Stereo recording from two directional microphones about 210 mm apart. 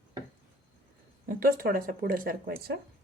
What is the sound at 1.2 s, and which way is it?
Speech, 40° right (ahead or behind).